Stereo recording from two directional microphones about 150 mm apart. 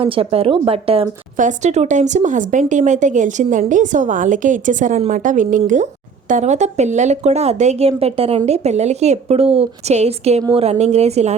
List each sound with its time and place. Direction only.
0.0 s speech: 40° right (ahead or behind)
1.4 s speech: 55° right (ahead or behind)